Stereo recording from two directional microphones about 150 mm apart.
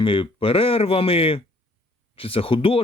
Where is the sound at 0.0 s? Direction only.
35° left (ahead or behind).